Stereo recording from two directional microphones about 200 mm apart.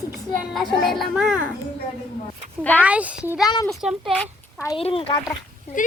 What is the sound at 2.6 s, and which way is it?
Speech, 10° left (ahead or behind).